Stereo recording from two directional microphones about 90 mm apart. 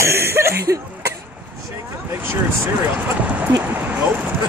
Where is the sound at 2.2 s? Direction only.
25° right (ahead or behind).